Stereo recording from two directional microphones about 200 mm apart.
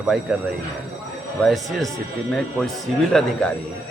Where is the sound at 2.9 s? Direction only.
Centre (ahead or behind).